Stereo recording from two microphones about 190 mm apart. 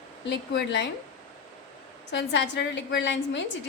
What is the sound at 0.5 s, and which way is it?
Speech, 65° left (ahead or behind).